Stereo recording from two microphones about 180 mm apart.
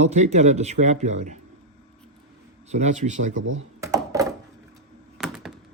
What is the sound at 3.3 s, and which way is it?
Speech, 90° right.